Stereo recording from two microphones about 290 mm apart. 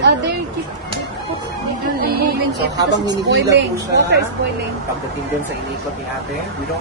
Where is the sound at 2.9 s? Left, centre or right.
Right.